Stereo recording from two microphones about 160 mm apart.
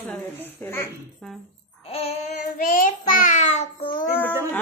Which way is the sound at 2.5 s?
55° left (ahead or behind).